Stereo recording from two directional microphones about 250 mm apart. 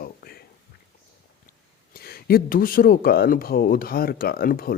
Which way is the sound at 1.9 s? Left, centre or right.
Left.